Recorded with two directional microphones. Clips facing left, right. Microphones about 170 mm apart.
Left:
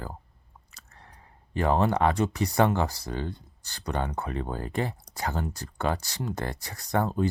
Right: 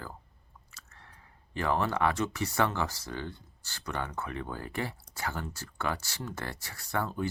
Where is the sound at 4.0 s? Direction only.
35° left (ahead or behind).